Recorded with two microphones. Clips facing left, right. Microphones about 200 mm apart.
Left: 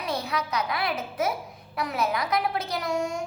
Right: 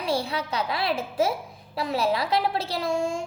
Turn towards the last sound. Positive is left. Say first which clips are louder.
# right 2 dB
turn(degrees=-25)  # may be behind; listen again after turning